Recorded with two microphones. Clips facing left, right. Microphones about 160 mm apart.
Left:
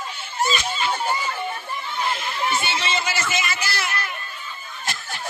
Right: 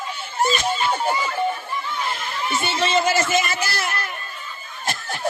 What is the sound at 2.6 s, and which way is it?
Speech, 45° right (ahead or behind).